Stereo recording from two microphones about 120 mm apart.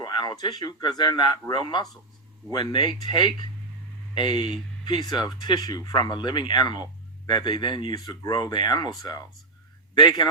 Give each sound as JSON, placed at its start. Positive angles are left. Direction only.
{"t": 0.0, "sound": "speech", "side_deg": 40}